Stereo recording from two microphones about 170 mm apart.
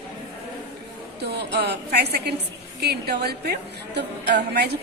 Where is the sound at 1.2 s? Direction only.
75° right (ahead or behind).